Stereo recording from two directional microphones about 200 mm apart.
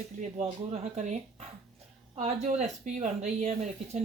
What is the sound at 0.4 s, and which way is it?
Speech, 35° right (ahead or behind).